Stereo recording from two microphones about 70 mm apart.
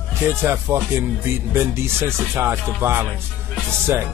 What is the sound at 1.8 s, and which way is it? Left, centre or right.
Speech, right.